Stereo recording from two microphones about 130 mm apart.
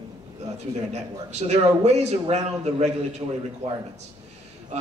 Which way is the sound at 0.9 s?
60° right (ahead or behind).